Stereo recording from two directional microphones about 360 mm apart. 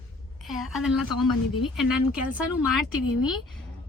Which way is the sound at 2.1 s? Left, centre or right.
Centre.